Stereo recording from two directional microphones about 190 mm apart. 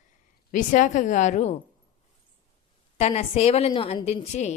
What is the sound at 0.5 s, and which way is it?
A woman's voice, 40° left (ahead or behind).